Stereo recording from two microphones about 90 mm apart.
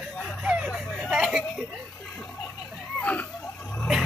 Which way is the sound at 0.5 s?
5° right (ahead or behind).